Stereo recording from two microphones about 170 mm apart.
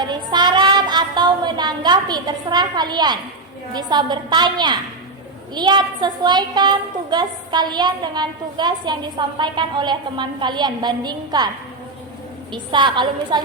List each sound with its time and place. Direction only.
0.0 s child singing: 25° right (ahead or behind)
3.7 s a woman's voice: 25° right (ahead or behind)